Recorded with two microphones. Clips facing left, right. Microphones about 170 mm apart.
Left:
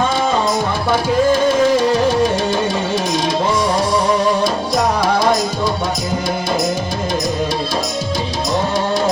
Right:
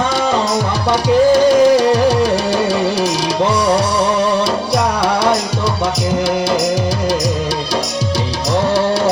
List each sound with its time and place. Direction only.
0.9 s music: 75° right (ahead or behind)